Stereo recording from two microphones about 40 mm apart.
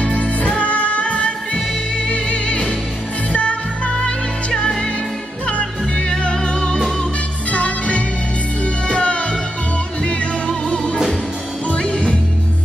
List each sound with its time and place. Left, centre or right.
0.0 s music: left